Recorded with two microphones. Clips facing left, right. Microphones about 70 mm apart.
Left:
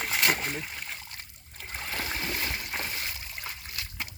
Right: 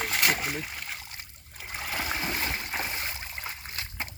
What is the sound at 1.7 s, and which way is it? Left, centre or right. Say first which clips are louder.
Stream: right 2 dB; centre.